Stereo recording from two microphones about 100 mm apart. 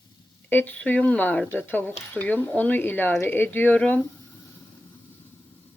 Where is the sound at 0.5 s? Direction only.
20° left (ahead or behind).